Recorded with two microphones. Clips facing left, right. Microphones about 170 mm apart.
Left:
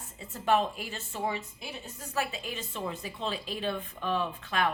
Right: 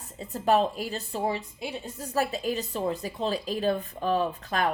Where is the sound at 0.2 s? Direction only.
40° right (ahead or behind).